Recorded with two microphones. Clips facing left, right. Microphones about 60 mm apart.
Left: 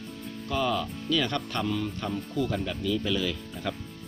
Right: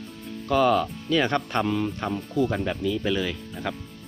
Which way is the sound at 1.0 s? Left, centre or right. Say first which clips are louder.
Right 2 dB; right.